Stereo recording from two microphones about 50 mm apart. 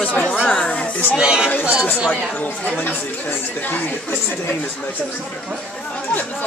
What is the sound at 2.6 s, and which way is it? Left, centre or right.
Speech, left.